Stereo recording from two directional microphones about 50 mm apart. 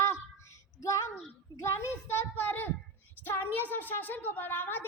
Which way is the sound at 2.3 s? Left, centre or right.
Left.